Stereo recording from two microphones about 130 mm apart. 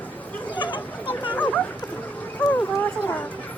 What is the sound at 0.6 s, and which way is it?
Chatter, 35° left (ahead or behind).